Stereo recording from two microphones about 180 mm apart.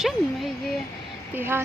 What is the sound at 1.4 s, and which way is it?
Speech, 10° right (ahead or behind).